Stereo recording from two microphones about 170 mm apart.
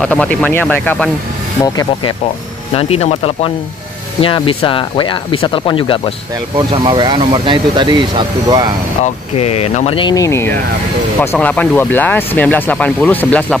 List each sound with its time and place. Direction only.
0.0 s speech: 5° left (ahead or behind)
1.6 s speech: 20° left (ahead or behind)
2.7 s speech: 35° left (ahead or behind)
6.5 s speech: 30° right (ahead or behind)
9.0 s speech: 40° left (ahead or behind); by 13.6 s 10° left (ahead or behind)